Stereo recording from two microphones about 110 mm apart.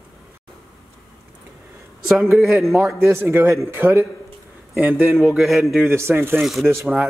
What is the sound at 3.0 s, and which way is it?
Speech, 25° right (ahead or behind).